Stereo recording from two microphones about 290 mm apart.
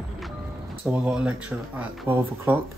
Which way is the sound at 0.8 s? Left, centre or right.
Centre.